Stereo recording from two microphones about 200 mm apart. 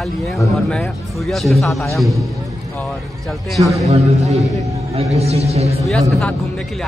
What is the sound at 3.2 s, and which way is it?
Speech, centre (ahead or behind).